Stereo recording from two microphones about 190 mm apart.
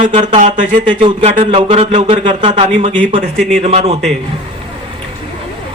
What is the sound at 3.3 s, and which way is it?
Speech, centre (ahead or behind).